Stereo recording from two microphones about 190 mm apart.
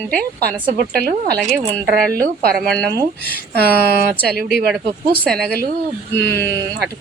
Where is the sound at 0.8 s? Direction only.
55° right (ahead or behind).